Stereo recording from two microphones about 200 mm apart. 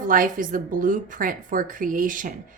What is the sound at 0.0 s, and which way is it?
A woman's voice, 40° right (ahead or behind).